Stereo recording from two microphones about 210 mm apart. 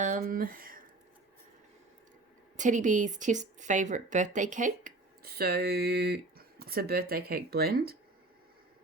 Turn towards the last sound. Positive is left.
turn(degrees=-45)  # may be behind; listen again after turning